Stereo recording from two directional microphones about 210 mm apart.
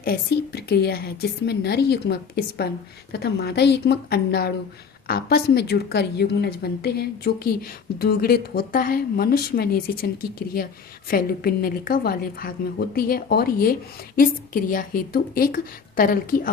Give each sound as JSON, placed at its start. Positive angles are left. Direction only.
{"t": 0.0, "sound": "a woman's voice", "side_deg": 50}